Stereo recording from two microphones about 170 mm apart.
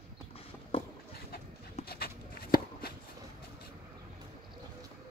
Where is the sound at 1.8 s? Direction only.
65° left (ahead or behind).